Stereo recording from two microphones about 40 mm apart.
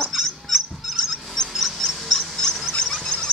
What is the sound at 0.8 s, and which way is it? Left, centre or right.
Mouse, centre.